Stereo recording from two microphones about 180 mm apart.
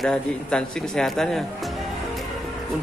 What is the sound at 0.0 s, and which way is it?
Speech, 5° left (ahead or behind).